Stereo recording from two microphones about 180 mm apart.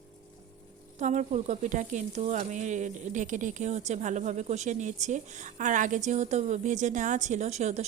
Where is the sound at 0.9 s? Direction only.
40° right (ahead or behind).